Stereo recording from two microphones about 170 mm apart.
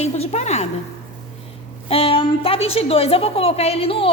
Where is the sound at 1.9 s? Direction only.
35° left (ahead or behind).